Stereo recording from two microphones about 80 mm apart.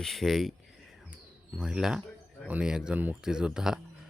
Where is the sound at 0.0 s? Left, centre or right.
Centre.